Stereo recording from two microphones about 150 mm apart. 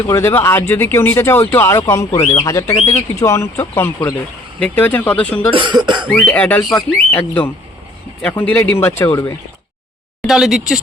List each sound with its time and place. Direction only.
0.1 s speech: 15° left (ahead or behind)
5.5 s cough: 30° right (ahead or behind)
6.1 s speech: 10° left (ahead or behind)
10.2 s speech: centre (ahead or behind)